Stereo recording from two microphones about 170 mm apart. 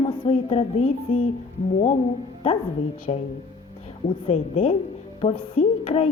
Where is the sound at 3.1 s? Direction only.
30° left (ahead or behind).